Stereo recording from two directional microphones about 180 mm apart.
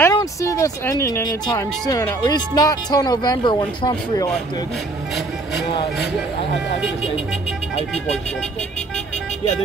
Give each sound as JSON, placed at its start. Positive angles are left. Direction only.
{"t": 0.0, "sound": "speech", "side_deg": 20}